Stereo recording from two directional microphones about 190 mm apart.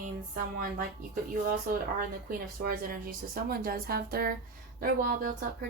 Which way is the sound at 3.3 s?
50° right (ahead or behind).